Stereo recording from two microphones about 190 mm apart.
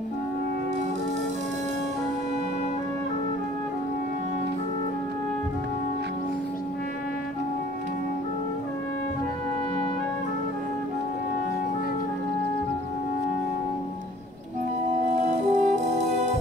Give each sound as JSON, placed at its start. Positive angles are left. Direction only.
{"t": 15.0, "sound": "music", "side_deg": -40}